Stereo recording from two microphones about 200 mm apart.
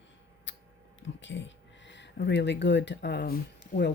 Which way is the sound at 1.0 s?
65° left (ahead or behind).